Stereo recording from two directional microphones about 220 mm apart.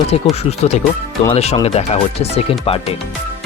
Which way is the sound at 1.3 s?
25° left (ahead or behind).